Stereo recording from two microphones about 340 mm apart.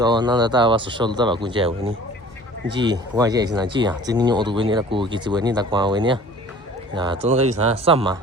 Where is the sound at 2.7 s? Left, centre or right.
Centre.